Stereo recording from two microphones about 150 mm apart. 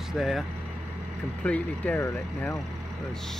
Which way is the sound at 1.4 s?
10° left (ahead or behind).